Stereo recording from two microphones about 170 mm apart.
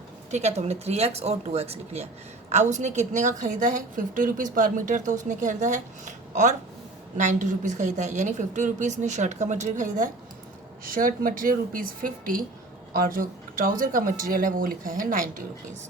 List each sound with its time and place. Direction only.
0.3 s a woman's voice: 40° right (ahead or behind)